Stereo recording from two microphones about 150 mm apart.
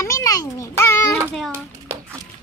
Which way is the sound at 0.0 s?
20° left (ahead or behind).